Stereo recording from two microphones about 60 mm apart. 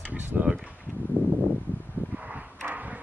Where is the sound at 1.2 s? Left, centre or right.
Left.